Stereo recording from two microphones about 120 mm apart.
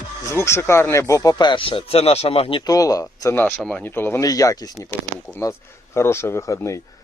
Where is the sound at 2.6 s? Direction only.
30° left (ahead or behind).